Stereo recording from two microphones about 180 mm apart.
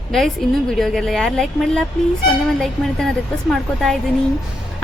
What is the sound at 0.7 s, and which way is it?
A woman's voice, centre (ahead or behind).